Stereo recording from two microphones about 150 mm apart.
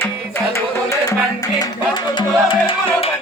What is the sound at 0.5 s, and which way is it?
Music, 20° left (ahead or behind).